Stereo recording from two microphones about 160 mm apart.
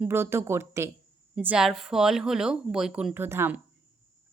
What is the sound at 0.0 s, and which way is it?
Speech, 15° right (ahead or behind).